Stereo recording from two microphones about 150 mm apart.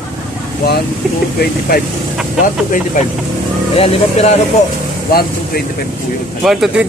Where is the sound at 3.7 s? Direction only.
45° left (ahead or behind).